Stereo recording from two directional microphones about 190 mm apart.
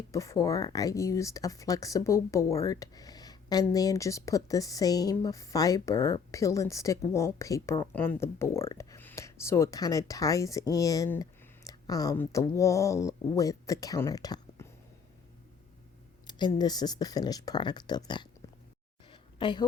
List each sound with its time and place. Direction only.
0.1 s speech: 15° left (ahead or behind)
16.2 s speech: 25° left (ahead or behind)
19.1 s a sound: 25° left (ahead or behind)